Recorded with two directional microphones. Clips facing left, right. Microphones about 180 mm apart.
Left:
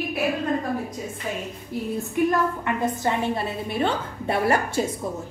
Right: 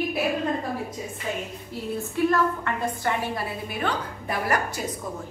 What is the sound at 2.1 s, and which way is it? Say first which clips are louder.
A woman's voice: even; 15° left (ahead or behind).